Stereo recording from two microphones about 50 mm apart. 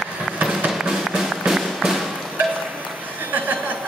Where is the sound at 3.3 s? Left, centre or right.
Right.